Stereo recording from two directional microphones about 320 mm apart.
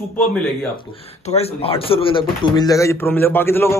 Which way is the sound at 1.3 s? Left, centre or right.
Centre.